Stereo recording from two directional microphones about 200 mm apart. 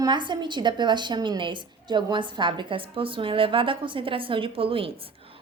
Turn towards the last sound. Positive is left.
turn(degrees=-25)  # may be behind; listen again after turning